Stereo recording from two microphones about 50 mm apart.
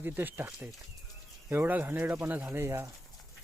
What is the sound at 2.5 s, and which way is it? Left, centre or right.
Speech, right.